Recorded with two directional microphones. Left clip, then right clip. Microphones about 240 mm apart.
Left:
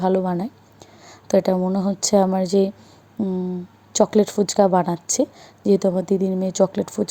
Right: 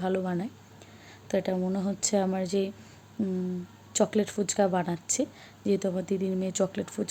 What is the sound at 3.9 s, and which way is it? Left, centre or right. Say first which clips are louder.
Speech: left 9 dB; left.